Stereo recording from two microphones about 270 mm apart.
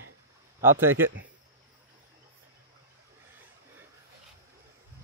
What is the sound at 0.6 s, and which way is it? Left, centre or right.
Speech, centre.